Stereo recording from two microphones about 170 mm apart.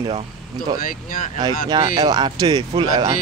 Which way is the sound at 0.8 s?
55° left (ahead or behind).